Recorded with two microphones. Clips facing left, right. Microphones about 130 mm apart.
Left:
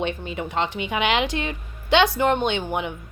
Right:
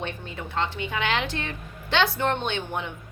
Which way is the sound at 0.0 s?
20° left (ahead or behind).